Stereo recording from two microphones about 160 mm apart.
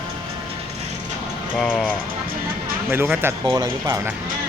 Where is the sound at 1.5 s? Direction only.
5° left (ahead or behind).